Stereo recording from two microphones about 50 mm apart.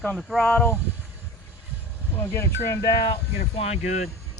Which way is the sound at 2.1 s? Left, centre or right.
Left.